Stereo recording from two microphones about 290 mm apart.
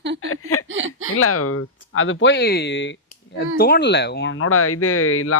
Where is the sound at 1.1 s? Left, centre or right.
Left.